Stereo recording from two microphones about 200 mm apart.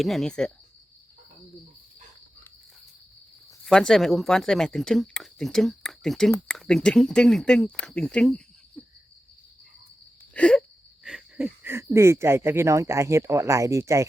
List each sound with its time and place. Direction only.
0.0 s speech: centre (ahead or behind)
3.7 s speech: centre (ahead or behind)
10.3 s wheeze: 5° left (ahead or behind)
11.0 s speech: 5° right (ahead or behind)